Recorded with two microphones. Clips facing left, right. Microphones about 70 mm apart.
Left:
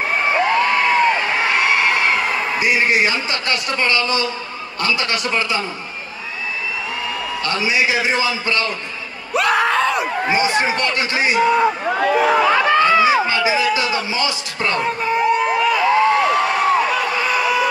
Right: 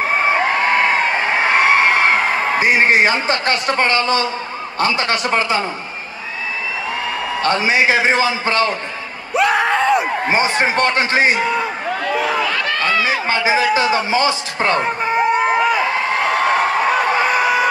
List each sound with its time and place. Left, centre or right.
0.1 s a sound: right
4.7 s a man's voice: right
7.4 s a man's voice: right
9.3 s screaming: centre
9.9 s a man's voice: right
11.5 s crowd: centre
13.3 s speech: right
16.3 s a sound: right